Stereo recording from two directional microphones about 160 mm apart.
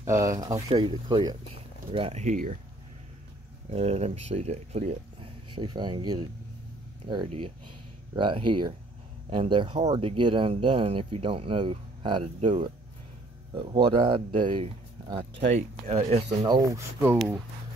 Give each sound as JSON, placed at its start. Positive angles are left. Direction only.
{"t": 0.0, "sound": "speech", "side_deg": -20}
{"t": 3.7, "sound": "speech", "side_deg": -45}
{"t": 16.4, "sound": "speech", "side_deg": -20}